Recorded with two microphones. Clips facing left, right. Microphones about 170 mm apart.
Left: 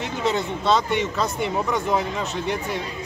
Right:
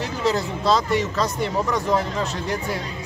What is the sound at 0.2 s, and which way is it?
Speech, centre (ahead or behind).